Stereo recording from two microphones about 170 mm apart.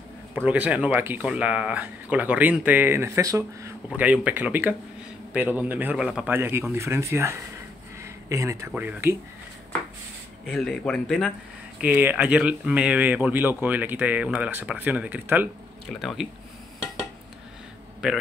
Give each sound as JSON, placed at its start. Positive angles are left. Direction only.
{"t": 0.5, "sound": "speech", "side_deg": -10}
{"t": 10.5, "sound": "speech", "side_deg": 5}
{"t": 11.8, "sound": "speech", "side_deg": -10}
{"t": 15.9, "sound": "speech", "side_deg": 0}